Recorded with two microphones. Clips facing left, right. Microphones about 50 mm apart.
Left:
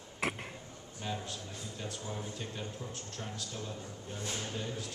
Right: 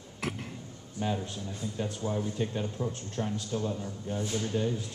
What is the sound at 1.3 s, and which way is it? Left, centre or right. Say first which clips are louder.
A man's voice: right 6 dB; right.